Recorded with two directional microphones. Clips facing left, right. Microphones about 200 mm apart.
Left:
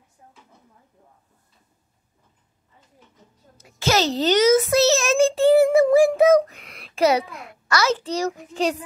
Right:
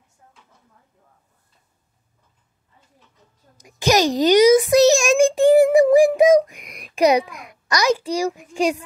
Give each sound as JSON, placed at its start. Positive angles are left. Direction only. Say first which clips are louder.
{"t": 0.2, "sound": "drawer open or close", "louder": "left 3 dB", "side_deg": 20}
{"t": 3.5, "sound": "a child's voice", "louder": "right 3 dB", "side_deg": -15}